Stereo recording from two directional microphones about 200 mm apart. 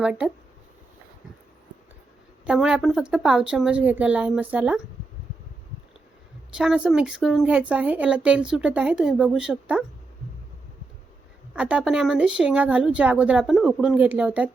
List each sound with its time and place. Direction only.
0.0 s speech: 5° right (ahead or behind)
2.5 s speech: 5° right (ahead or behind)
6.6 s speech: 5° right (ahead or behind)
11.5 s speech: 5° right (ahead or behind)